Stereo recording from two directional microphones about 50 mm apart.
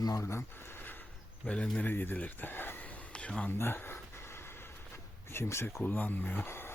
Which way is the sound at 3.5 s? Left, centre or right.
Left.